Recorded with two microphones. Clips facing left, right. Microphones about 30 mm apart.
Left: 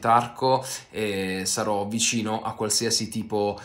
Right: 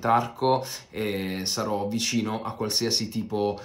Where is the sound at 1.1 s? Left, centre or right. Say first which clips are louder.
Left 2 dB; left.